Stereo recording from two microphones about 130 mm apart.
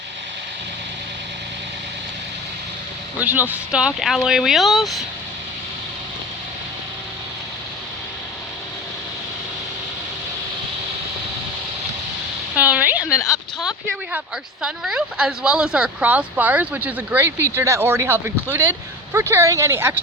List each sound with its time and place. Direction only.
3.2 s speech: 15° right (ahead or behind)
12.5 s a sound: 10° right (ahead or behind)
13.1 s speech: 20° left (ahead or behind)
13.6 s speech: 5° right (ahead or behind)